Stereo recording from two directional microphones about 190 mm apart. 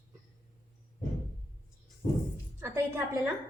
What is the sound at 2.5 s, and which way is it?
Speech, 15° right (ahead or behind).